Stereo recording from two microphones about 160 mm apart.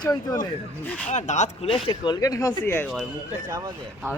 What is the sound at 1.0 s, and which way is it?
Speech, 50° left (ahead or behind).